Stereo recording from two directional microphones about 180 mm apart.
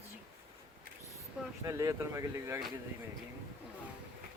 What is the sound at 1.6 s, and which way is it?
Speech, 20° right (ahead or behind).